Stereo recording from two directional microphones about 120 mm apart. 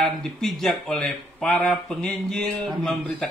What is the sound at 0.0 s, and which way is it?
Speech, 5° left (ahead or behind).